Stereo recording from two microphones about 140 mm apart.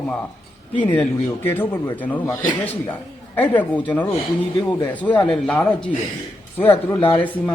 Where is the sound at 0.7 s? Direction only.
15° left (ahead or behind).